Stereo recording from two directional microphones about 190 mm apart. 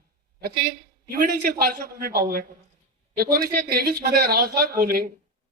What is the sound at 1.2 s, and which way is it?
A man's voice, 50° right (ahead or behind).